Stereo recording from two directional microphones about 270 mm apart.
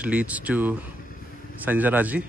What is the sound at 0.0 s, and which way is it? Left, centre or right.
A man's voice, centre.